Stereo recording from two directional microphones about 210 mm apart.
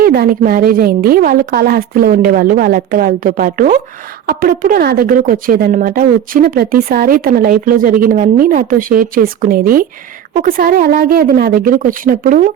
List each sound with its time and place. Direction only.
0.0 s speech: 45° right (ahead or behind)